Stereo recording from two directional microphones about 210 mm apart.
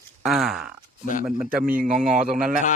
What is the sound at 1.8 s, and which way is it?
Speech, 40° right (ahead or behind).